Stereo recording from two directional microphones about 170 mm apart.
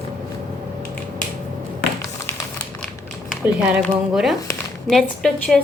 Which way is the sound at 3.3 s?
5° right (ahead or behind).